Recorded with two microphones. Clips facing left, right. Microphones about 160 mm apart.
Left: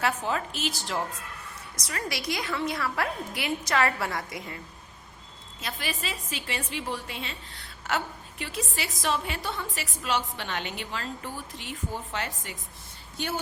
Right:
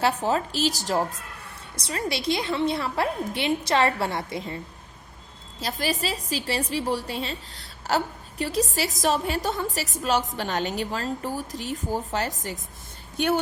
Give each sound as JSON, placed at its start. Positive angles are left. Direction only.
{"t": 0.0, "sound": "a woman's voice", "side_deg": -35}
{"t": 1.7, "sound": "a woman's voice", "side_deg": -30}
{"t": 13.1, "sound": "speech", "side_deg": -60}